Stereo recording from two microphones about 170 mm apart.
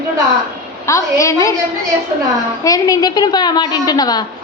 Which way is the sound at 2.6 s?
20° left (ahead or behind).